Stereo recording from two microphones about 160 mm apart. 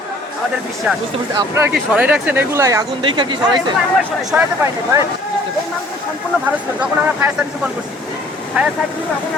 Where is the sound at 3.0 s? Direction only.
30° right (ahead or behind).